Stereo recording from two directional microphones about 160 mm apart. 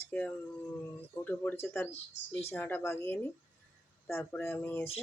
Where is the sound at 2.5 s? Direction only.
10° left (ahead or behind).